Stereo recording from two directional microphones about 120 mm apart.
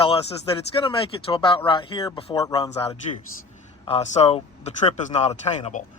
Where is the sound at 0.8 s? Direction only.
50° left (ahead or behind).